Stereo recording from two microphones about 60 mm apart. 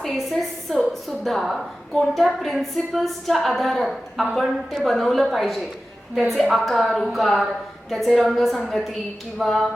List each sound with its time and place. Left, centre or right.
0.0 s a woman's voice: centre